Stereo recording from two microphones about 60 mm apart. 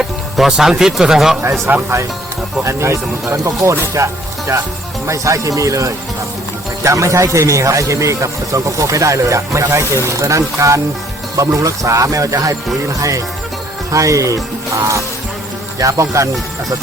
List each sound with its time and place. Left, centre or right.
0.0 s speech: centre
1.7 s speech: right
2.6 s speech: right
15.8 s speech: right